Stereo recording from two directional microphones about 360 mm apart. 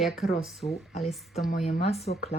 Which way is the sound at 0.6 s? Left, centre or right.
Centre.